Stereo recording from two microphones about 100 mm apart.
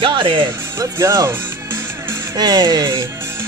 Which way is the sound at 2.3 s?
45° right (ahead or behind).